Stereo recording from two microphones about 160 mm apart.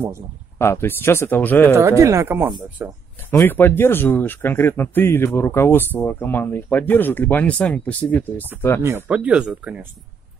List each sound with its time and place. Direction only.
0.6 s speech: 15° left (ahead or behind)
1.8 s speech: 20° right (ahead or behind)
3.3 s speech: 15° left (ahead or behind)
8.8 s speech: 15° right (ahead or behind)